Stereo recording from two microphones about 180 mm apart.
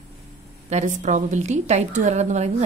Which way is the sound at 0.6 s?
40° right (ahead or behind).